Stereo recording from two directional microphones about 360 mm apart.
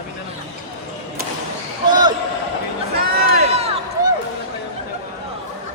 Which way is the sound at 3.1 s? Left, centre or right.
Centre.